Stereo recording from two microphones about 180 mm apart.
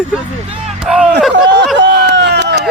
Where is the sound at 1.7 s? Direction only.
75° right (ahead or behind).